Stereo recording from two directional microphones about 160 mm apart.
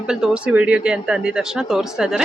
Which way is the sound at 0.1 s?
5° right (ahead or behind).